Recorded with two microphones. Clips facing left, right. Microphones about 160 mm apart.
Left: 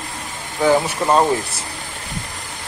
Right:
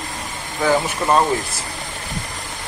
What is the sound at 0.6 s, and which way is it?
Speech, 20° left (ahead or behind).